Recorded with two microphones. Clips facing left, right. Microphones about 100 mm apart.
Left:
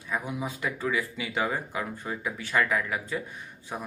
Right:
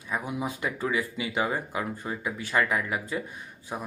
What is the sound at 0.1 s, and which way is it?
Speech, 15° right (ahead or behind).